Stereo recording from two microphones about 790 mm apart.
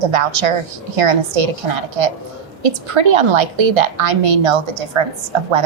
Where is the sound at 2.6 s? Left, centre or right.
Right.